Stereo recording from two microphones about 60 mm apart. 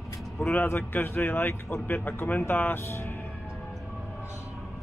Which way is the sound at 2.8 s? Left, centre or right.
Left.